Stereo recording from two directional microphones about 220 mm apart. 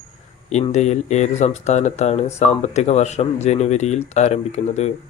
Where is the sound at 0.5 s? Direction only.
30° left (ahead or behind).